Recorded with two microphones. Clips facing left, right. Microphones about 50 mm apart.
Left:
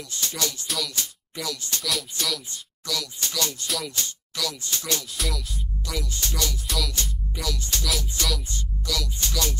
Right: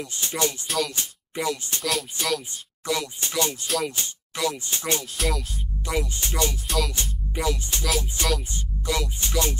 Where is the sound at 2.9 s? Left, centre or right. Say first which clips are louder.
Right 4 dB; right.